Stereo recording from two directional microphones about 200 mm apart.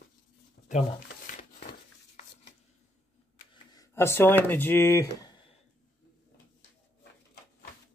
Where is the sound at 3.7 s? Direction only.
15° left (ahead or behind).